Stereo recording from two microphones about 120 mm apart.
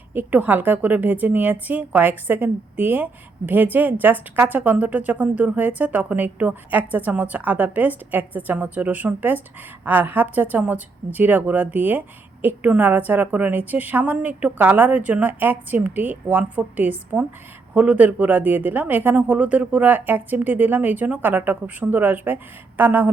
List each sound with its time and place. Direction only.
0.1 s a woman's voice: 15° right (ahead or behind)